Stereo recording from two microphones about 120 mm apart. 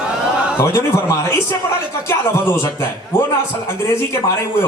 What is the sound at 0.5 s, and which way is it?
A man's voice, 20° left (ahead or behind).